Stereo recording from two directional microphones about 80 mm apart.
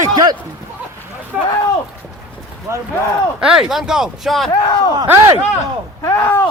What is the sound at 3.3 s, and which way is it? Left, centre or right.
Speech, centre.